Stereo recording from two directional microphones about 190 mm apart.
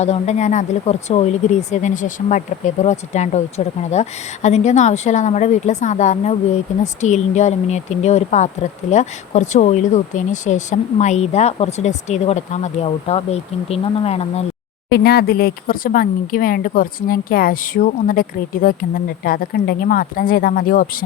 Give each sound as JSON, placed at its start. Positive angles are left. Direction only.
{"t": 0.0, "sound": "speech", "side_deg": 35}
{"t": 14.8, "sound": "speech", "side_deg": 55}